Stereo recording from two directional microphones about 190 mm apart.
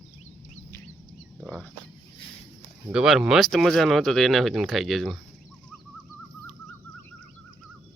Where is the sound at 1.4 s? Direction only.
5° left (ahead or behind).